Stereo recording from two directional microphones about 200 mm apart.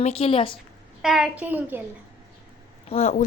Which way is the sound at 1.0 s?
Centre (ahead or behind).